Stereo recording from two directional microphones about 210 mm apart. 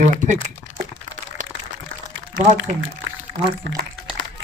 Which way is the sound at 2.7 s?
35° right (ahead or behind).